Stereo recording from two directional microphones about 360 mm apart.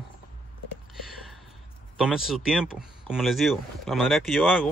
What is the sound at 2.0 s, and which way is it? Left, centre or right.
Speech, centre.